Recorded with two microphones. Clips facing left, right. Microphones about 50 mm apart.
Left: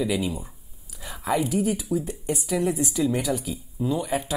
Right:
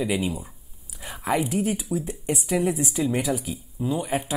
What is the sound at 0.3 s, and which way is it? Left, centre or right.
Speech, centre.